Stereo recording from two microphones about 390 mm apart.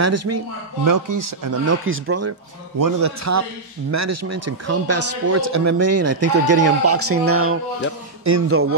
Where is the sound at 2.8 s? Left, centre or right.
Right.